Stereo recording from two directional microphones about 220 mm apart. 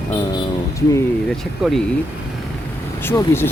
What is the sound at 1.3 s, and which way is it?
Speech, centre (ahead or behind).